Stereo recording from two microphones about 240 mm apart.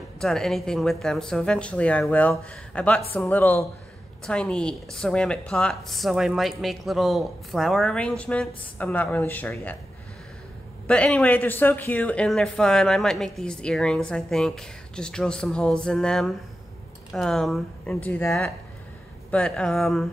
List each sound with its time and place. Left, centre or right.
0.2 s speech: centre
10.9 s speech: centre